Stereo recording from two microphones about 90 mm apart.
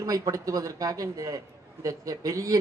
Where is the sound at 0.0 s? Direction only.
40° right (ahead or behind).